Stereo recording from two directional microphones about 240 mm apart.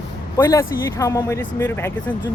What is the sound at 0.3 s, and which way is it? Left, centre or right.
Speech, centre.